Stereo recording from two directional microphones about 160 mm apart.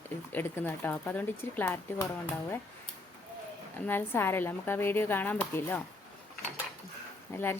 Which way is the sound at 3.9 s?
15° left (ahead or behind).